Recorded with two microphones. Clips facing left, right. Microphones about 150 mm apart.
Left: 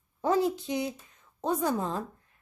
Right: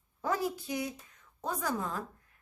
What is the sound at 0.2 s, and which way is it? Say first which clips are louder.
Speech: left 7 dB; 25° left (ahead or behind).